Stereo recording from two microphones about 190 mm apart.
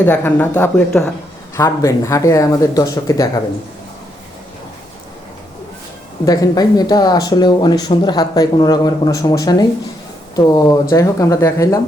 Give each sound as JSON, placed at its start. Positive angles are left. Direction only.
{"t": 0.0, "sound": "speech", "side_deg": 10}
{"t": 6.2, "sound": "speech", "side_deg": 20}